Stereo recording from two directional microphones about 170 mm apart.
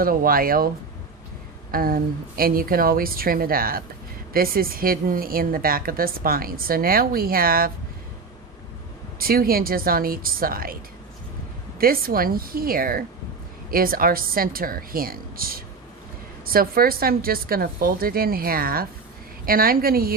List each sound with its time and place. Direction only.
0.0 s a woman's voice: 55° right (ahead or behind)
1.7 s a woman's voice: 60° right (ahead or behind)
9.1 s a woman's voice: 60° right (ahead or behind)
11.8 s a woman's voice: 60° right (ahead or behind)